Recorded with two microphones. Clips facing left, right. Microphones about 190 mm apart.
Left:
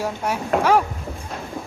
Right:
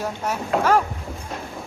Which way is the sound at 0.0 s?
10° left (ahead or behind).